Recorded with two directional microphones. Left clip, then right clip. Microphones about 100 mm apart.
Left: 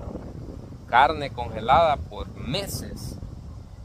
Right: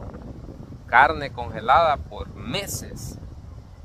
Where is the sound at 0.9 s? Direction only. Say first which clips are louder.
Right 2 dB; 30° left (ahead or behind).